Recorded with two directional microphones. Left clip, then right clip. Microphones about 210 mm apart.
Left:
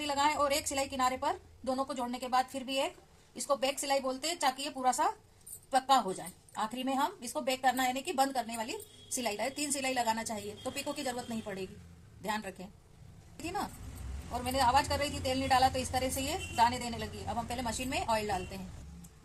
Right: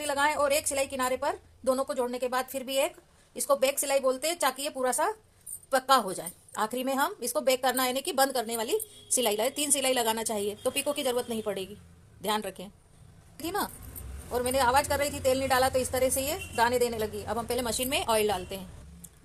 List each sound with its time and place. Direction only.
0.0 s a woman's voice: 40° right (ahead or behind)